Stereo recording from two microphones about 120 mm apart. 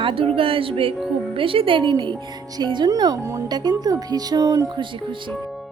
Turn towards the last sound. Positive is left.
turn(degrees=-30)  # may be behind; listen again after turning